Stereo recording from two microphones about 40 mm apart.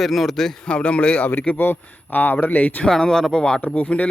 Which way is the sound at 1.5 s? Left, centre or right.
Left.